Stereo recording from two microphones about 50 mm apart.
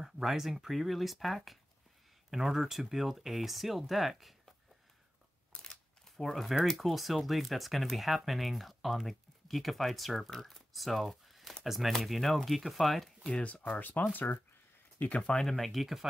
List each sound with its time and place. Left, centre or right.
0.0 s speech: centre
5.5 s a sound: centre
6.6 s speech: centre
13.4 s speech: left
15.0 s speech: left
15.3 s speech: centre